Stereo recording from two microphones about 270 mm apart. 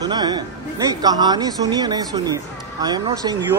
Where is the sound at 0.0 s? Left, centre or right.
Centre.